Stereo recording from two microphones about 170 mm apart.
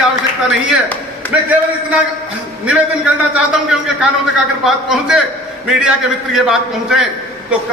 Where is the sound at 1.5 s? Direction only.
10° right (ahead or behind).